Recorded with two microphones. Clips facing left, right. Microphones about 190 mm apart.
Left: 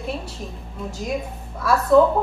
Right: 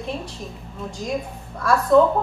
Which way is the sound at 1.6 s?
5° left (ahead or behind).